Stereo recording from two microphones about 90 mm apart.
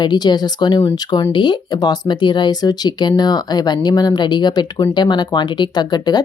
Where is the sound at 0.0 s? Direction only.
55° left (ahead or behind).